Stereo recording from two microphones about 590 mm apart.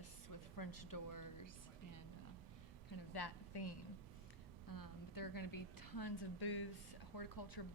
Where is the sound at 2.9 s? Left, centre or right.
Left.